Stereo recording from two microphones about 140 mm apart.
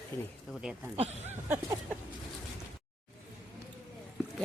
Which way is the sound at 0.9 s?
45° right (ahead or behind).